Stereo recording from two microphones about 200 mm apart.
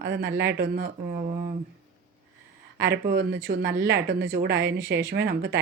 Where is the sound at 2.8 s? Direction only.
55° right (ahead or behind).